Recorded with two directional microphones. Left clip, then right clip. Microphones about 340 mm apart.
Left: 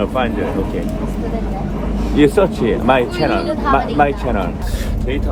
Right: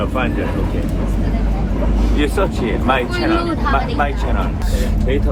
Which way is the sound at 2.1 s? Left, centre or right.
Left.